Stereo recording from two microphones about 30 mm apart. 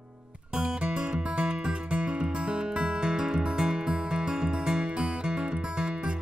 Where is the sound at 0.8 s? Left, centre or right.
Right.